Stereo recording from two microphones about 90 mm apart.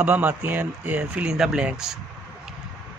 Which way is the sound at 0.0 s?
20° right (ahead or behind).